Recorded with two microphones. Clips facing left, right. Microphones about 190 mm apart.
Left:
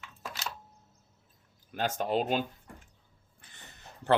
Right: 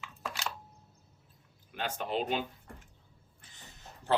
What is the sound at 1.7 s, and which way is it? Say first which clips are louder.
Speech: left 5 dB; 40° left (ahead or behind).